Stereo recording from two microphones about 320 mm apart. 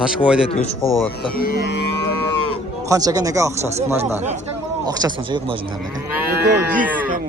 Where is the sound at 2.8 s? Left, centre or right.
Centre.